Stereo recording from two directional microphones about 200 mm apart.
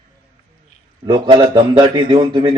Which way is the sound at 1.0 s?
20° right (ahead or behind).